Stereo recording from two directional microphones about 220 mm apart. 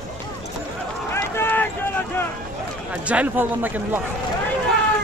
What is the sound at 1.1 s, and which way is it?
Run, 10° left (ahead or behind).